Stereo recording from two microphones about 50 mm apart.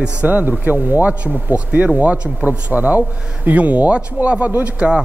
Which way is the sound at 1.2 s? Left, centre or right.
Right.